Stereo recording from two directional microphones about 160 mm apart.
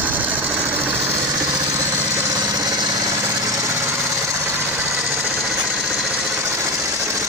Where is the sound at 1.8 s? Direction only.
20° right (ahead or behind).